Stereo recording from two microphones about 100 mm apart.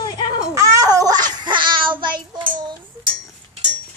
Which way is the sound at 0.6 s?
35° right (ahead or behind).